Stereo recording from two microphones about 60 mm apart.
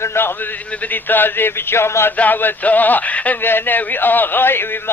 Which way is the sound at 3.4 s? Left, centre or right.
Left.